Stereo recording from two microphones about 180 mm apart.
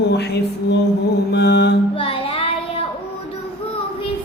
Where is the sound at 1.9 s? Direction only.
30° left (ahead or behind).